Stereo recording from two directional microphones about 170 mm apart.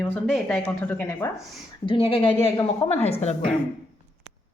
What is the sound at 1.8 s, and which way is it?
Speech, 30° left (ahead or behind).